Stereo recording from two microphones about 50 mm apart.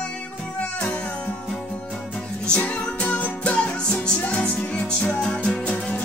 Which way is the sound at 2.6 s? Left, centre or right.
Left.